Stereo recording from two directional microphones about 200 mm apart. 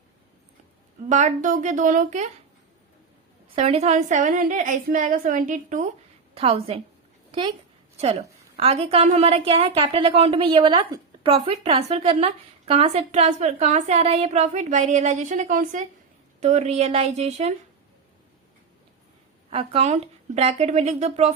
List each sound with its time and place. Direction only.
1.1 s a woman's voice: 40° right (ahead or behind)
3.5 s a woman's voice: 30° right (ahead or behind)
7.9 s a woman's voice: 30° right (ahead or behind)
19.5 s a woman's voice: 30° right (ahead or behind)